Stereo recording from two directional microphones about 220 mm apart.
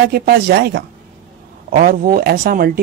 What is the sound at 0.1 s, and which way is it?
A man's voice, 45° right (ahead or behind).